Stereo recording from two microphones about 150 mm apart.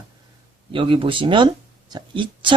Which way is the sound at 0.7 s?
35° right (ahead or behind).